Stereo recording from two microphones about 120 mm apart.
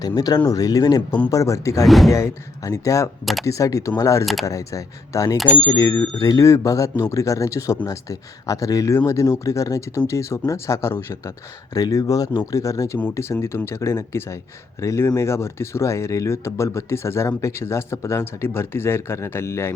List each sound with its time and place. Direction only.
0.2 s speech: 35° left (ahead or behind)
1.8 s speech: centre (ahead or behind)
2.0 s speech: 25° left (ahead or behind)